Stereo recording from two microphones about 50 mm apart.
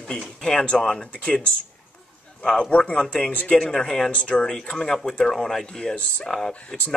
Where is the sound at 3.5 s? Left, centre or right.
Centre.